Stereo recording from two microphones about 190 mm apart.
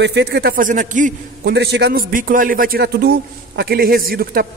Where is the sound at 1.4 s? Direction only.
60° right (ahead or behind).